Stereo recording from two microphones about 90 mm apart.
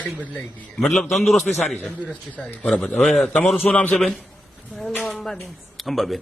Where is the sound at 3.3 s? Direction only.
15° left (ahead or behind).